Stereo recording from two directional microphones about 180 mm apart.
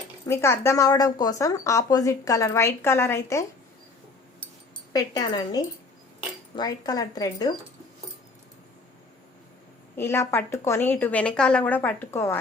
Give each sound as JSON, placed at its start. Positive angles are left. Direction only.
{"t": 0.3, "sound": "a woman's voice", "side_deg": 15}
{"t": 4.9, "sound": "speech", "side_deg": 20}
{"t": 10.0, "sound": "a woman's voice", "side_deg": 15}